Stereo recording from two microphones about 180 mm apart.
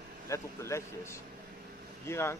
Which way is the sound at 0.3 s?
15° left (ahead or behind).